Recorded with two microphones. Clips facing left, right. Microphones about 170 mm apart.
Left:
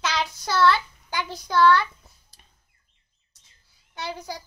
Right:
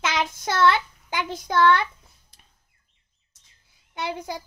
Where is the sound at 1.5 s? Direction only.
20° right (ahead or behind).